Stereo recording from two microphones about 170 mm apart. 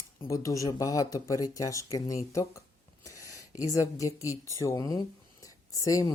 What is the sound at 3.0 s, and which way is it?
Speech, 20° left (ahead or behind).